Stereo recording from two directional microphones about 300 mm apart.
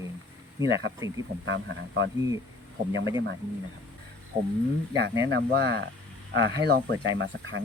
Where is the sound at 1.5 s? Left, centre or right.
Right.